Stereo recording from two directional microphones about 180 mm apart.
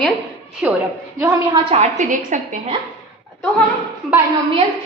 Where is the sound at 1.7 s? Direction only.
40° right (ahead or behind).